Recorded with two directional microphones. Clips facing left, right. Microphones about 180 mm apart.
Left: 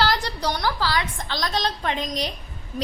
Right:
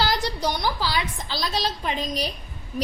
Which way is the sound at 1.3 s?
5° right (ahead or behind).